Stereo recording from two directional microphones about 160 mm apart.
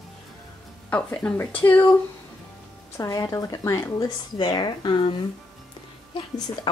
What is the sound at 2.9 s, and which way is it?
Speech, 20° left (ahead or behind).